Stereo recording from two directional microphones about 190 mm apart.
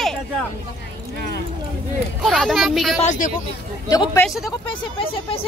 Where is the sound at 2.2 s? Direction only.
Centre (ahead or behind).